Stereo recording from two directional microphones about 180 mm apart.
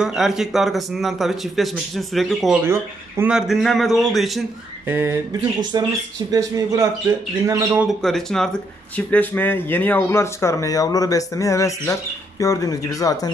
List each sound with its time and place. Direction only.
0.0 s speech: 5° right (ahead or behind)
2.6 s speech: 15° right (ahead or behind)
4.8 s speech: 15° right (ahead or behind)
8.0 s speech: centre (ahead or behind); by 13.3 s 20° left (ahead or behind)